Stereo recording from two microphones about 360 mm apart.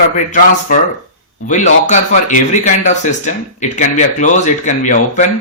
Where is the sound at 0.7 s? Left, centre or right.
Left.